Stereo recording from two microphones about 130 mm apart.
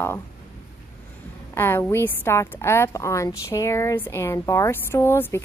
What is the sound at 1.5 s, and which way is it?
A woman's voice, 20° left (ahead or behind).